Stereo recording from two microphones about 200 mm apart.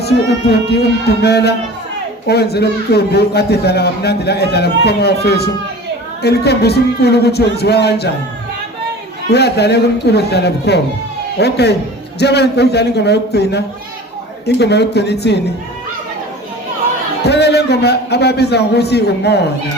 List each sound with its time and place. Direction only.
0.0 s a man's voice: 55° left (ahead or behind)
9.3 s a man's voice: 55° left (ahead or behind)
17.2 s a man's voice: 55° left (ahead or behind)